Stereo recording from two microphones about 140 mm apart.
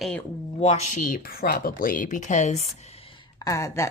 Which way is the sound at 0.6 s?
50° left (ahead or behind).